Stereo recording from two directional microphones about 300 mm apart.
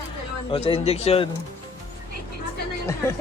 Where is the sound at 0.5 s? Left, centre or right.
Centre.